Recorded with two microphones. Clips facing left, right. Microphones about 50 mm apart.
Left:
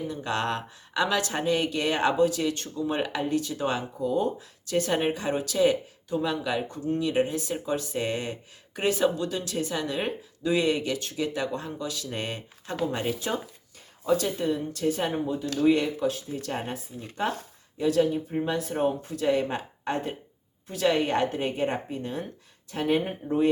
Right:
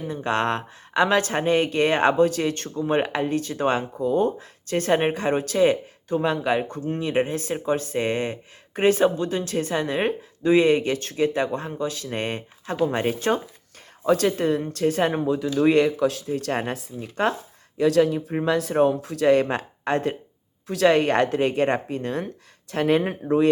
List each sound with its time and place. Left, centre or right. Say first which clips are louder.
0.0 s speech: right 5 dB; right
14.1 s speech: right 5 dB; right